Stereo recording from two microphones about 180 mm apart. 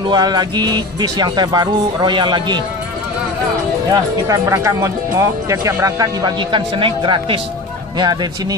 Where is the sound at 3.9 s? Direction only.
20° right (ahead or behind).